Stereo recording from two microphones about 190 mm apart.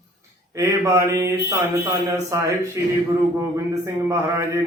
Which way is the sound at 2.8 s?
15° right (ahead or behind).